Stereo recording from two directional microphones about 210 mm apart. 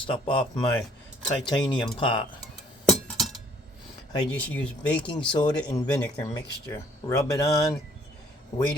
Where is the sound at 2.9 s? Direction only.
Centre (ahead or behind).